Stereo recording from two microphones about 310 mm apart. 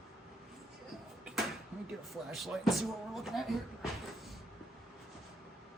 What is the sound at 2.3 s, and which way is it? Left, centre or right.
Speech, centre.